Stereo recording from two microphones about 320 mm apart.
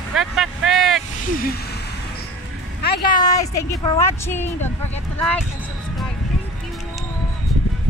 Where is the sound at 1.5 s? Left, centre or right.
Left.